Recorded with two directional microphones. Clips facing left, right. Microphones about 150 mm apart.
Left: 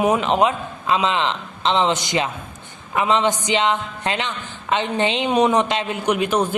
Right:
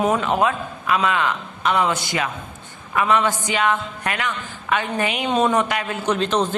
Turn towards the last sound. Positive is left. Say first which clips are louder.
# left 1 dB
turn(degrees=10)  # may be behind; listen again after turning